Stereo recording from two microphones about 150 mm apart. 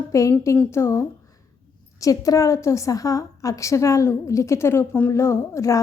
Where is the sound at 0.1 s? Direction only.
20° left (ahead or behind).